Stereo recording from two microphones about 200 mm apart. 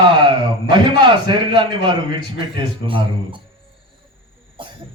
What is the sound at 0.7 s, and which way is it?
A man's voice, 25° right (ahead or behind).